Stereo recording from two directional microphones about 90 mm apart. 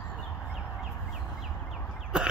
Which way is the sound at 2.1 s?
10° right (ahead or behind).